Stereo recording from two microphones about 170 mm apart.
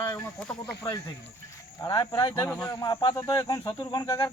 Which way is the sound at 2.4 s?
5° left (ahead or behind).